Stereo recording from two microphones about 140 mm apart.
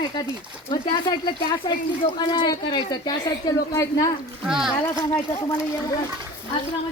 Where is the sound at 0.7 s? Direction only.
35° left (ahead or behind).